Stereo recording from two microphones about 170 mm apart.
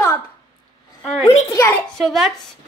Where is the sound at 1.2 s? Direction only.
20° left (ahead or behind).